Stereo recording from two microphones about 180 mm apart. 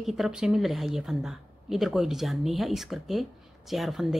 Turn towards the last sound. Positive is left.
turn(degrees=0)  # may be behind; listen again after turning